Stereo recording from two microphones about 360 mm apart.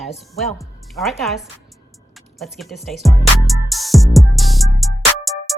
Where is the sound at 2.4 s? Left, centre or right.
Centre.